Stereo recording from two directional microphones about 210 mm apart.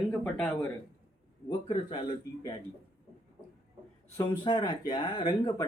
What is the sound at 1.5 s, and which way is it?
Speech, 25° left (ahead or behind).